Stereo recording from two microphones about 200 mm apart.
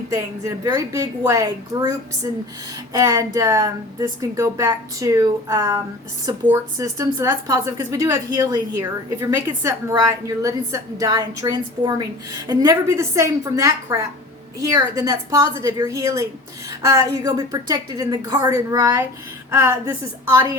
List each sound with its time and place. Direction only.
0.1 s speech: 15° right (ahead or behind)
2.9 s speech: 15° right (ahead or behind)